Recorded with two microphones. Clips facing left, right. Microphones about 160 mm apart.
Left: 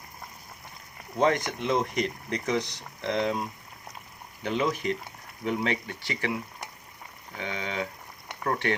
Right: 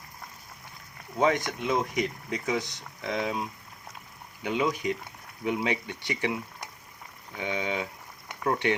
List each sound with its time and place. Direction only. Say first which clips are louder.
1.2 s speech: left 1 dB; centre (ahead or behind); by 6.3 s 20° right (ahead or behind)
7.3 s speech: right 2 dB; 15° right (ahead or behind)